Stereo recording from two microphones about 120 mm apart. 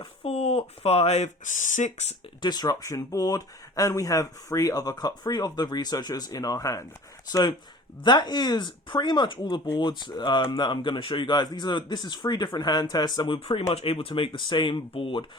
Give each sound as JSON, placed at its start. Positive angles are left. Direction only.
{"t": 0.0, "sound": "speech", "side_deg": 55}
{"t": 2.4, "sound": "speech", "side_deg": 35}
{"t": 13.1, "sound": "speech", "side_deg": 45}